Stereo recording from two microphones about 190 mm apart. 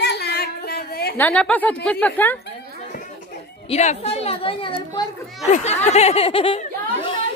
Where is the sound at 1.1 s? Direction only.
10° left (ahead or behind).